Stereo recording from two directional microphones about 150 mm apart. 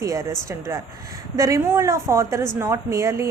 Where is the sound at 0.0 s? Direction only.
20° right (ahead or behind).